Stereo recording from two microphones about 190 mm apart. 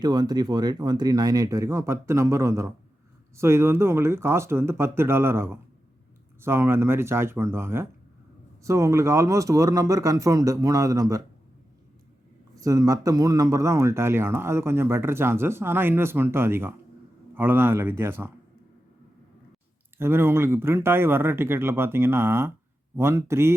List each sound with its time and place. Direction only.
0.0 s speech: 20° right (ahead or behind)
12.5 s speech: 20° right (ahead or behind)
20.0 s speech: 10° right (ahead or behind)